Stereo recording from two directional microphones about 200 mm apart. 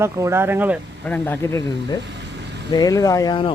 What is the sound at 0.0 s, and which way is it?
Speech, 15° right (ahead or behind).